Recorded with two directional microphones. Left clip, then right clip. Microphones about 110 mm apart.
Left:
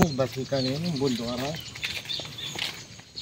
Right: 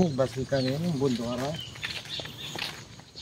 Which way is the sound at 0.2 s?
5° right (ahead or behind).